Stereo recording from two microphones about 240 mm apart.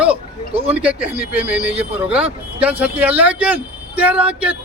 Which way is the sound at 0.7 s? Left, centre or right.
Centre.